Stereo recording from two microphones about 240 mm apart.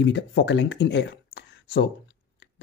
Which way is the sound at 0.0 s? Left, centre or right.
Left.